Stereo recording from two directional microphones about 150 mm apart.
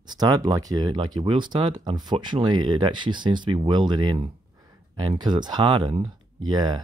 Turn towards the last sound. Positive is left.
turn(degrees=-30)  # may be behind; listen again after turning